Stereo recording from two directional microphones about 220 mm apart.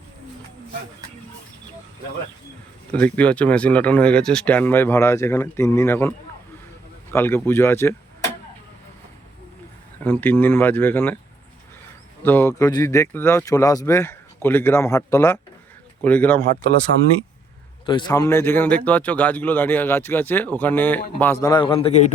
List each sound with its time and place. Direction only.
2.9 s speech: 5° left (ahead or behind)
10.0 s speech: 10° left (ahead or behind)
12.2 s speech: 10° left (ahead or behind)
17.8 s speech: 20° left (ahead or behind)
21.4 s a man's voice: 20° left (ahead or behind)